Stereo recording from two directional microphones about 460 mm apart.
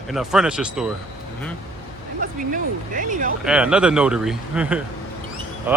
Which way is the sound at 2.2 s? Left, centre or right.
Centre.